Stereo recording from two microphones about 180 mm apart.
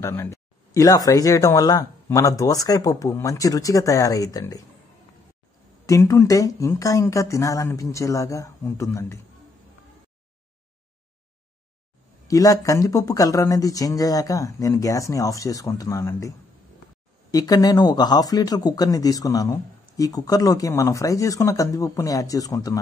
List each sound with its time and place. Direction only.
0.0 s speech: 15° left (ahead or behind)
5.9 s speech: 15° left (ahead or behind)
12.3 s speech: 20° left (ahead or behind)